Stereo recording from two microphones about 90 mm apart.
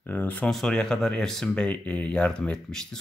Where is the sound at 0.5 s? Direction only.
5° left (ahead or behind).